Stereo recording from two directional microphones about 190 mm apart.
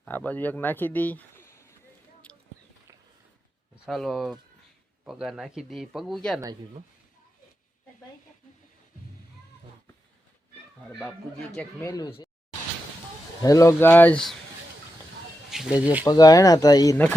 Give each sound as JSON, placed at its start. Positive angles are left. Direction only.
{"t": 0.0, "sound": "speech", "side_deg": 10}
{"t": 2.3, "sound": "a sound", "side_deg": 10}
{"t": 3.8, "sound": "speech", "side_deg": 0}
{"t": 10.8, "sound": "speech", "side_deg": 0}
{"t": 11.5, "sound": "speech", "side_deg": 15}
{"t": 13.4, "sound": "speech", "side_deg": 15}
{"t": 15.4, "sound": "speech", "side_deg": 0}
{"t": 16.0, "sound": "speech", "side_deg": 20}